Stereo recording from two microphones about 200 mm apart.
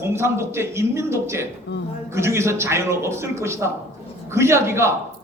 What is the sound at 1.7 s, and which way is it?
Speech, 60° left (ahead or behind).